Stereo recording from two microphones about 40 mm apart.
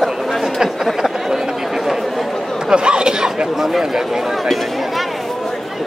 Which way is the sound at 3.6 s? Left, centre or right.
Centre.